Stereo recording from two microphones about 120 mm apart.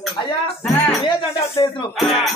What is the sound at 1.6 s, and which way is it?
Speech, 35° left (ahead or behind).